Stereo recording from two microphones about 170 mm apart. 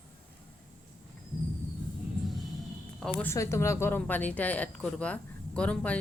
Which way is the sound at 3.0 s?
10° left (ahead or behind).